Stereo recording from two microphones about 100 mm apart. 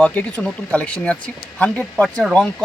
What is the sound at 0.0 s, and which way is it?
Speech, 15° left (ahead or behind).